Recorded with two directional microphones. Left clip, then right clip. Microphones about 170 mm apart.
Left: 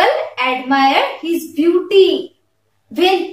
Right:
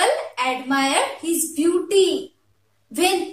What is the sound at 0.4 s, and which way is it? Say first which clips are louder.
A woman's voice: left 7 dB; 20° right (ahead or behind).